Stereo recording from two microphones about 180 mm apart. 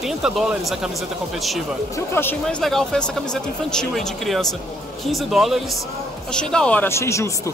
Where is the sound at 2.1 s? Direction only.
10° left (ahead or behind).